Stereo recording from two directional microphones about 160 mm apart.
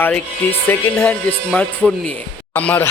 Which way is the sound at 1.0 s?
5° left (ahead or behind).